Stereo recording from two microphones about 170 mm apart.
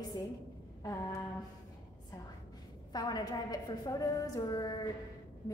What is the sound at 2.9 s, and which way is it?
A woman's voice, 25° left (ahead or behind).